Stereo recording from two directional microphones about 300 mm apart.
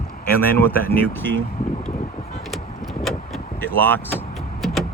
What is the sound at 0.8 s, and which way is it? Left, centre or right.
Speech, left.